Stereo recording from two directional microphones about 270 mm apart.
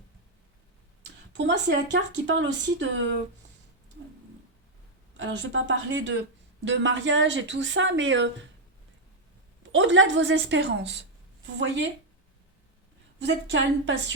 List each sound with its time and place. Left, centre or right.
1.3 s speech: right
5.1 s a woman's voice: right
9.7 s a woman's voice: right
13.1 s speech: right